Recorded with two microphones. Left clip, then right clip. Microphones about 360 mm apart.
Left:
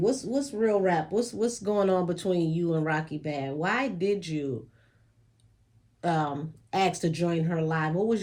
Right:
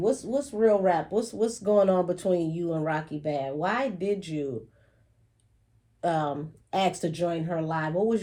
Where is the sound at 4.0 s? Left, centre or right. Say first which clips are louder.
Left 1 dB; right.